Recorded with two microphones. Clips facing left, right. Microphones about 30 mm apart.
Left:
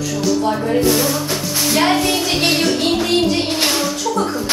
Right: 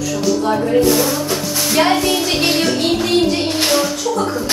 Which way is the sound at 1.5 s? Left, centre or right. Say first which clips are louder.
Even; centre.